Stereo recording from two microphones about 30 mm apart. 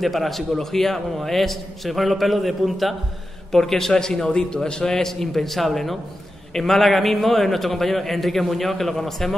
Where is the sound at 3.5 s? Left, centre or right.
Centre; by 4.9 s left.